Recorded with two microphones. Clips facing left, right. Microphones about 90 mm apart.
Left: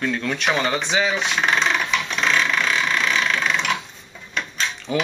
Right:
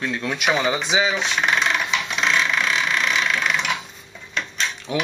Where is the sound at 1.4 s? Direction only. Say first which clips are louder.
Left 1 dB; 5° right (ahead or behind).